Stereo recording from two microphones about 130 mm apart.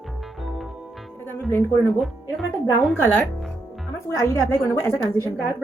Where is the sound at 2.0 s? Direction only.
Centre (ahead or behind).